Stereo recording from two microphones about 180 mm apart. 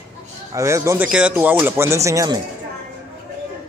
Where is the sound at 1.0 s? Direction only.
5° right (ahead or behind).